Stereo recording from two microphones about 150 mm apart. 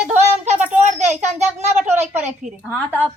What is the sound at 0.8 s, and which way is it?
A child's voice, 50° right (ahead or behind).